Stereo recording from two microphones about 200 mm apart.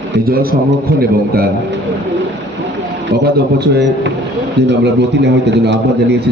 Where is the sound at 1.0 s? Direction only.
50° right (ahead or behind).